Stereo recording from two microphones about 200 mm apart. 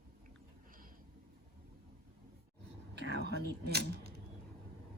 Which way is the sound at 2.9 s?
55° right (ahead or behind).